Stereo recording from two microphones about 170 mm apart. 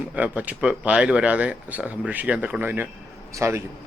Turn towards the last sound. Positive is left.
turn(degrees=-15)  # may be behind; listen again after turning